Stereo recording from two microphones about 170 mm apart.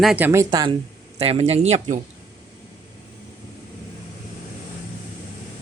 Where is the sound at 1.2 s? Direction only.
35° right (ahead or behind).